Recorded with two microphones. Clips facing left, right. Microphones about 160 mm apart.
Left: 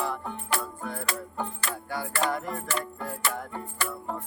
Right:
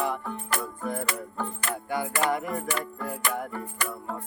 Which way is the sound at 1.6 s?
20° right (ahead or behind).